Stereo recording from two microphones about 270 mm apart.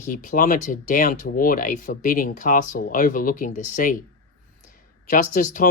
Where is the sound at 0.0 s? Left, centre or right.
Left.